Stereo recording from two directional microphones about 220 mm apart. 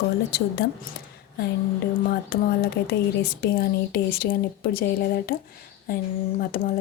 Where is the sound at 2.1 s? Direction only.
45° left (ahead or behind).